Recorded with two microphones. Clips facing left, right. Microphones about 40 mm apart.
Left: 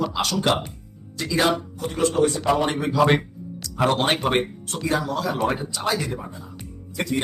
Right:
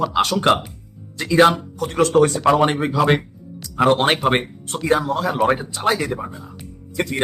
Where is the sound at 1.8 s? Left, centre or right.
Right.